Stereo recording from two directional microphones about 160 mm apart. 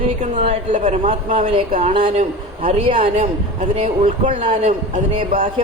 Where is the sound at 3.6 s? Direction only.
50° right (ahead or behind).